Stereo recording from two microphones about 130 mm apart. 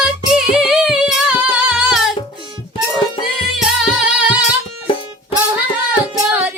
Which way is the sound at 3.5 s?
5° right (ahead or behind).